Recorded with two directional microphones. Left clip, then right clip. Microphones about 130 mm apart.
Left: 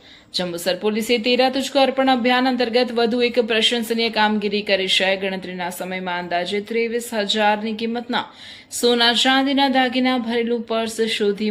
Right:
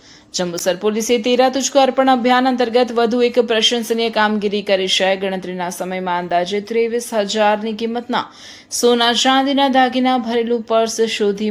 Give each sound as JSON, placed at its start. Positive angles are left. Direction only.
{"t": 0.3, "sound": "speech", "side_deg": -40}